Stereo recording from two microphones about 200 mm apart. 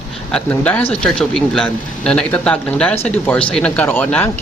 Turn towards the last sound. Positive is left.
turn(degrees=10)  # may be behind; listen again after turning